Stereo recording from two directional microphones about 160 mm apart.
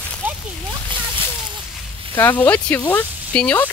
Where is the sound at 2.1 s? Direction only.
10° left (ahead or behind).